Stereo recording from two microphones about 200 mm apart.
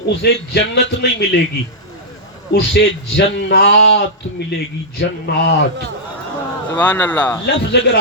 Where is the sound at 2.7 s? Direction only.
60° left (ahead or behind).